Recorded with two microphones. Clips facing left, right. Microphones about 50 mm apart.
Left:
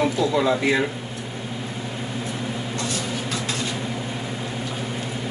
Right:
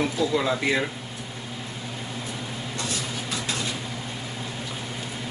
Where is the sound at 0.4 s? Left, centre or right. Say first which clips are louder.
Left 4 dB; centre.